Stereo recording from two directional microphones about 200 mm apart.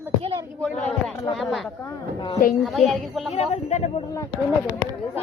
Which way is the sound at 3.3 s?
35° left (ahead or behind).